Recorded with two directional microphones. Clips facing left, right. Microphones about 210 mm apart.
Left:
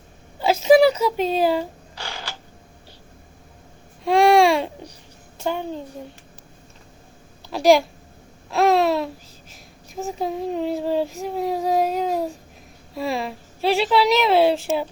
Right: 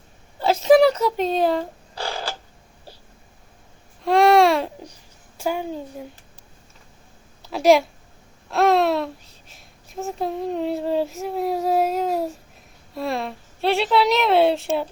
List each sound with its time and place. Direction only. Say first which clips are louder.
0.4 s speech: even; 5° left (ahead or behind)
2.0 s a sound: right 6 dB; 35° right (ahead or behind)
4.0 s baby cry: even; centre (ahead or behind)
5.4 s a child's voice: even; 10° right (ahead or behind)
7.5 s speech: even; centre (ahead or behind)
8.4 s a sound: even; centre (ahead or behind)
9.5 s speech: left 1 dB; centre (ahead or behind)